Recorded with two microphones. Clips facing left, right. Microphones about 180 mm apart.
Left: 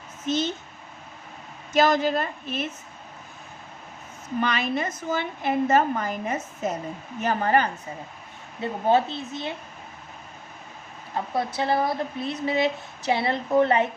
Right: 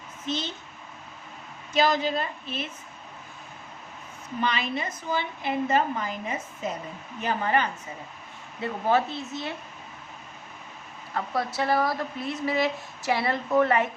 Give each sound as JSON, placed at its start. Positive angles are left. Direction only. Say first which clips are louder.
{"t": 0.3, "sound": "a woman's voice", "louder": "left 6 dB", "side_deg": 45}
{"t": 1.7, "sound": "a woman's voice", "louder": "left 3 dB", "side_deg": 45}
{"t": 4.4, "sound": "a woman's voice", "louder": "left 3 dB", "side_deg": 50}
{"t": 8.6, "sound": "a woman's voice", "louder": "left 3 dB", "side_deg": 25}
{"t": 11.1, "sound": "a woman's voice", "louder": "left 2 dB", "side_deg": 20}